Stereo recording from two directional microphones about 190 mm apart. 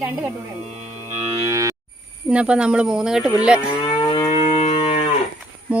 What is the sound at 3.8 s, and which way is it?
Livestock, 25° left (ahead or behind).